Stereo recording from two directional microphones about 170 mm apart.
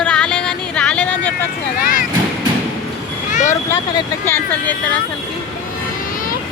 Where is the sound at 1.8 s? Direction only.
55° left (ahead or behind).